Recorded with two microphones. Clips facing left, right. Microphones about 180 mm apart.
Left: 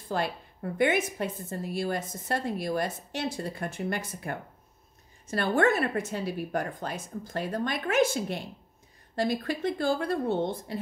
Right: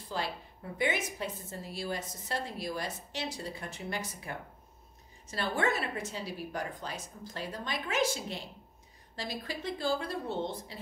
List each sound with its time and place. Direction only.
0.1 s a woman's voice: 55° left (ahead or behind)